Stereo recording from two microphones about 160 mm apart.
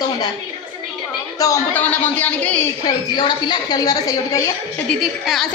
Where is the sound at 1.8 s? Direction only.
10° left (ahead or behind).